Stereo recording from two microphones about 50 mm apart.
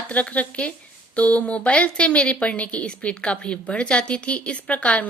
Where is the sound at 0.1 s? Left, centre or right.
Left.